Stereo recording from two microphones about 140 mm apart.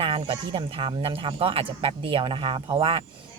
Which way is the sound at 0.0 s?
40° right (ahead or behind).